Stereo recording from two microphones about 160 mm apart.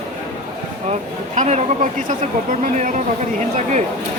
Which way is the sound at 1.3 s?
45° right (ahead or behind).